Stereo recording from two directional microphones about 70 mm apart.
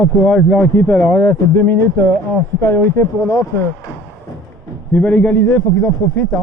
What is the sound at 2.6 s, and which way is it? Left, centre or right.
Speech, left.